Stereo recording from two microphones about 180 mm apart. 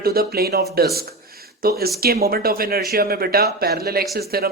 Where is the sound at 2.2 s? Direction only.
55° right (ahead or behind).